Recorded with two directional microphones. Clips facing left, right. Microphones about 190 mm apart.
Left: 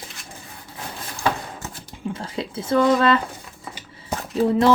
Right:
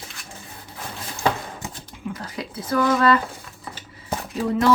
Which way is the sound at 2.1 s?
25° left (ahead or behind).